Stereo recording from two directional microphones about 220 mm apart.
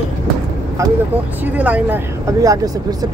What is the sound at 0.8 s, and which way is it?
Speech, 15° right (ahead or behind).